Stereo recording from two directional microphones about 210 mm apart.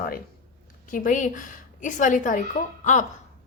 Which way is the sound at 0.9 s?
40° left (ahead or behind).